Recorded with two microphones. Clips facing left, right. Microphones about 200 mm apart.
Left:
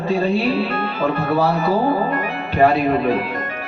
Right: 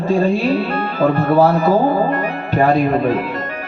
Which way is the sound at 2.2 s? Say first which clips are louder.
Left 1 dB; 45° right (ahead or behind).